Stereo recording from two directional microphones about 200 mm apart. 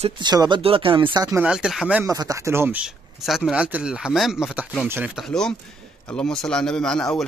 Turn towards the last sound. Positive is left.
turn(degrees=5)  # may be behind; listen again after turning